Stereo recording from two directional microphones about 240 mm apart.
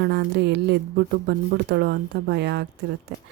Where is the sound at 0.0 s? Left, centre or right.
Right.